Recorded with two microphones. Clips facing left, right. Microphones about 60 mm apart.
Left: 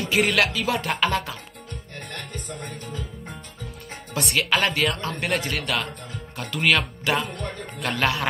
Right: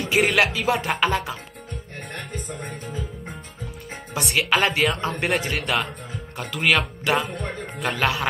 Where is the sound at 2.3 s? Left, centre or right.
Right.